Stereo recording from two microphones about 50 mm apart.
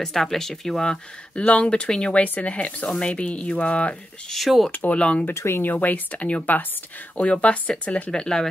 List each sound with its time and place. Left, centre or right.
0.0 s speech: centre
1.4 s speech: left
1.7 s speech: centre
2.2 s speech: left
4.3 s speech: centre
4.6 s speech: left
4.9 s speech: left
5.3 s speech: left
5.6 s speech: left
8.1 s speech: centre